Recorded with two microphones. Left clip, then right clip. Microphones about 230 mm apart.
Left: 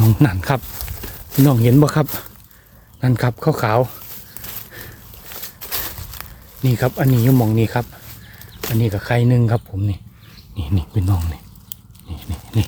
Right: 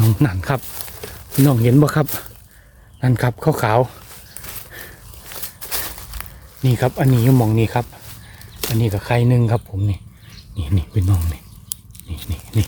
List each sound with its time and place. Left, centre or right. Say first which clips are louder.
0.2 s speech: left 2 dB; centre
0.7 s speech: right 1 dB; centre
4.4 s walk: right 1 dB; centre
10.5 s a sound: even; centre